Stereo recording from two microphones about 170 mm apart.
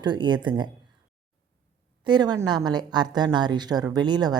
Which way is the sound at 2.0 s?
25° right (ahead or behind).